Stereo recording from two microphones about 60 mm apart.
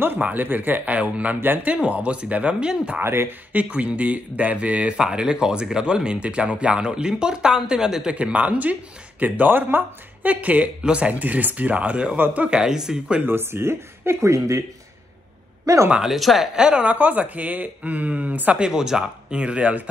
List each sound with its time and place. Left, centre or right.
0.0 s speech: right; by 3.0 s centre
3.0 s speech: right
3.5 s speech: right
8.2 s speech: right
13.2 s speech: right
15.6 s speech: right
16.0 s speech: centre
16.5 s speech: centre
18.6 s speech: centre